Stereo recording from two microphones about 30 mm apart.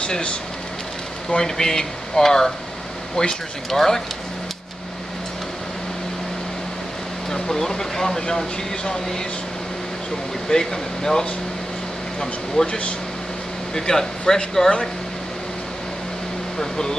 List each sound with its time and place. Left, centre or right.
0.0 s speech: left
1.3 s speech: centre
3.7 s speech: centre
7.5 s speech: centre
10.5 s speech: left
12.6 s speech: centre
13.7 s speech: centre
16.5 s speech: left